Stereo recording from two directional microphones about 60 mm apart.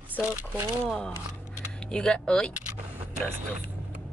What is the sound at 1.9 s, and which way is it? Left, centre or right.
Speech, centre.